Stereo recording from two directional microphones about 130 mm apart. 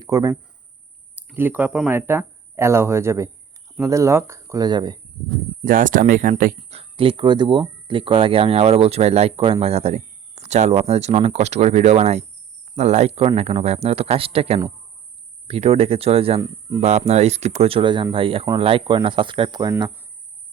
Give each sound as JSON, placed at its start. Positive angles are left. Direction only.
{"t": 0.0, "sound": "speech", "side_deg": -30}
{"t": 1.1, "sound": "speech", "side_deg": -15}
{"t": 5.6, "sound": "speech", "side_deg": -90}
{"t": 6.6, "sound": "speech", "side_deg": -50}
{"t": 16.4, "sound": "speech", "side_deg": -30}
{"t": 16.8, "sound": "speech", "side_deg": -55}